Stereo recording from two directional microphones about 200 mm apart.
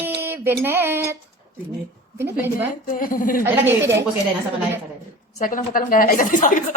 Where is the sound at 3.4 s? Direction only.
10° right (ahead or behind).